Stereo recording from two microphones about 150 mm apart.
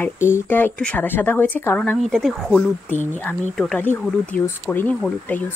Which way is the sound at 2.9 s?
55° left (ahead or behind).